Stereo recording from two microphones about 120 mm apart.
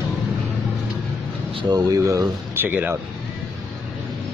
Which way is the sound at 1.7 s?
25° right (ahead or behind).